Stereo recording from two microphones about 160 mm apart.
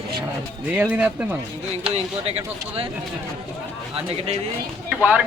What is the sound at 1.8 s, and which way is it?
Speech, 40° right (ahead or behind).